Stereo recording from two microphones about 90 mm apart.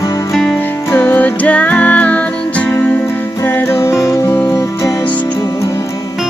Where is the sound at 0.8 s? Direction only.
20° left (ahead or behind).